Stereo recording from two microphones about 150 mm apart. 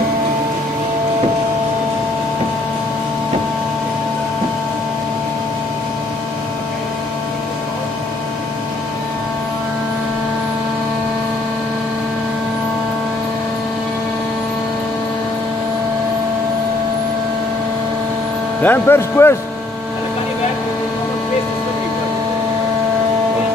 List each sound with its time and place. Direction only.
18.6 s speech: 15° left (ahead or behind)